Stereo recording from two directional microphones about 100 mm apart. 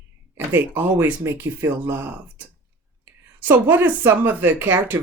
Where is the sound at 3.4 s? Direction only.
20° right (ahead or behind).